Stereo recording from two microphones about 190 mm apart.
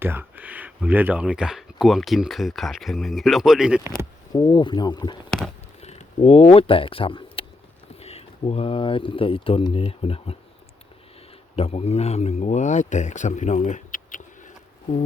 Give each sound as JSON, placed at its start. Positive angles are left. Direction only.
{"t": 0.0, "sound": "speech", "side_deg": -10}
{"t": 4.3, "sound": "speech", "side_deg": 20}
{"t": 5.8, "sound": "speech", "side_deg": 35}
{"t": 11.5, "sound": "a man's voice", "side_deg": 30}